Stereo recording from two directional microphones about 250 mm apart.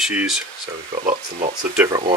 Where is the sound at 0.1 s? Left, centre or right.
Centre.